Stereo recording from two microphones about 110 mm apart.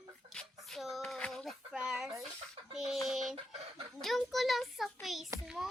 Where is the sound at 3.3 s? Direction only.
55° right (ahead or behind).